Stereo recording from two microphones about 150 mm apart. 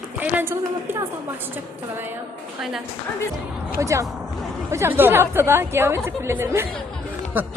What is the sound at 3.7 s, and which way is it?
Speech, 20° right (ahead or behind).